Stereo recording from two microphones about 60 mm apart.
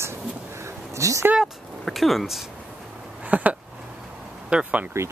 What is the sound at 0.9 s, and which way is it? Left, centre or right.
Speech, right.